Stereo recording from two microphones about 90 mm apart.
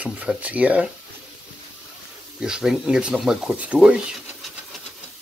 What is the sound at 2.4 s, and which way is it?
Speech, 5° right (ahead or behind).